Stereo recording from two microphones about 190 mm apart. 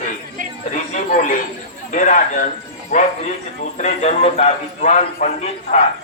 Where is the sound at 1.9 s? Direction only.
40° left (ahead or behind).